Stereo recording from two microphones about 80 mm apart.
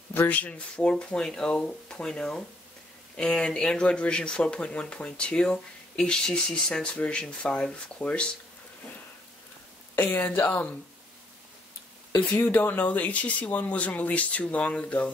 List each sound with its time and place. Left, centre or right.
0.1 s speech: left
9.9 s speech: left
12.2 s speech: centre